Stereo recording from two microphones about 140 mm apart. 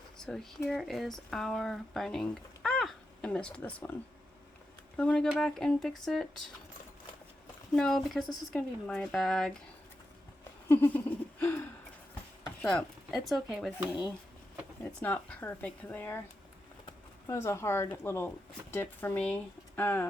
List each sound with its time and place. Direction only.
0.2 s speech: 5° left (ahead or behind)
4.9 s speech: 5° left (ahead or behind)
7.8 s speech: 5° left (ahead or behind)
10.7 s a sound: 15° left (ahead or behind)
12.6 s speech: centre (ahead or behind)
14.8 s speech: 10° left (ahead or behind)
17.2 s speech: 20° left (ahead or behind)